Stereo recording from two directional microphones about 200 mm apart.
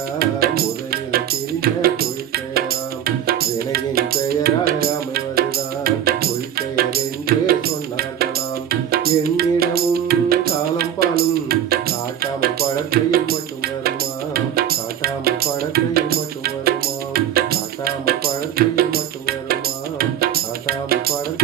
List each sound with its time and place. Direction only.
0.2 s music: 50° right (ahead or behind)
8.7 s music: 50° right (ahead or behind)